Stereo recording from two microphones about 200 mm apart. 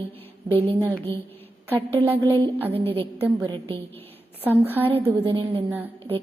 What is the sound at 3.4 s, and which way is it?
Speech, 30° right (ahead or behind).